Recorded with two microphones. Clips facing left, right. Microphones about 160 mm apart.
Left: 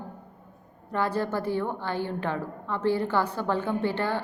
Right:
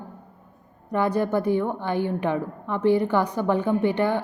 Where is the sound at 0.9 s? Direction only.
15° right (ahead or behind).